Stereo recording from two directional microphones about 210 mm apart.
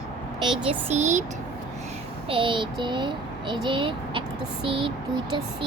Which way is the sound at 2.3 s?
25° right (ahead or behind).